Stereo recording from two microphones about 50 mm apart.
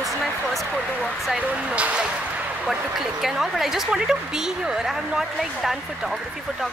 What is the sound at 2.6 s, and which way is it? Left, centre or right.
Speech, centre.